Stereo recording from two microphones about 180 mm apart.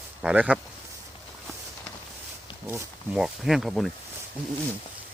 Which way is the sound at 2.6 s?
10° right (ahead or behind).